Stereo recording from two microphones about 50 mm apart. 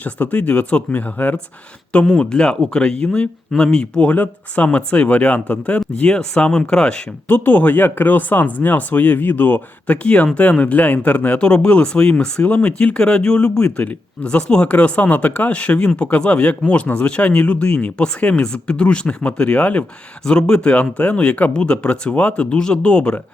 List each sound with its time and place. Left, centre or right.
0.0 s speech: left
2.1 s speech: centre
6.1 s speech: centre
7.3 s speech: left
9.8 s speech: left